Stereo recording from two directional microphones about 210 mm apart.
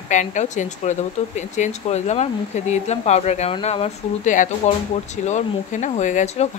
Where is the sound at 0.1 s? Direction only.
35° left (ahead or behind).